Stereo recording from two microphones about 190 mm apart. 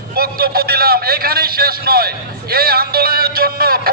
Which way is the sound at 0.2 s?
55° right (ahead or behind).